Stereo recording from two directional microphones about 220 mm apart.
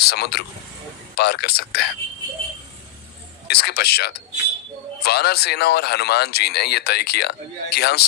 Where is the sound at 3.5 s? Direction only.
45° left (ahead or behind).